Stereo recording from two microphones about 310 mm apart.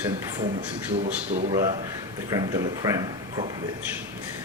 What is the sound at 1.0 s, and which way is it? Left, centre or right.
Speech, right.